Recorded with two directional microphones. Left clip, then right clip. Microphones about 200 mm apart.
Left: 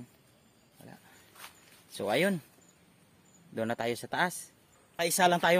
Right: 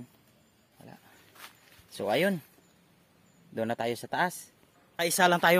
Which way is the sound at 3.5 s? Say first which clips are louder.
Right 1 dB; 10° right (ahead or behind).